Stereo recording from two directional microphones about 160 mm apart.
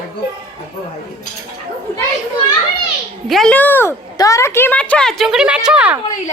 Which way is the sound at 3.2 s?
Centre (ahead or behind).